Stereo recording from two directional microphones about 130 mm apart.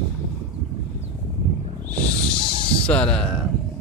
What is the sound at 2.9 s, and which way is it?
Speech, 10° left (ahead or behind).